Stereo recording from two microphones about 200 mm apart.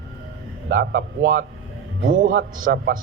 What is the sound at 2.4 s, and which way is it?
Speech, 65° right (ahead or behind).